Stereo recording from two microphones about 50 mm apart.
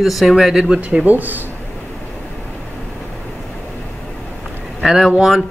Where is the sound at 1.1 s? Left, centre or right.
Right.